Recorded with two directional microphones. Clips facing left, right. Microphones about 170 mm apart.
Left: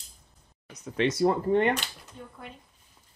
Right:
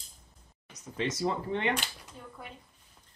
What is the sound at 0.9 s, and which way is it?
Speech, 60° left (ahead or behind).